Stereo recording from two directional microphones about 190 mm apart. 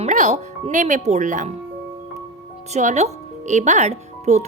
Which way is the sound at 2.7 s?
35° right (ahead or behind).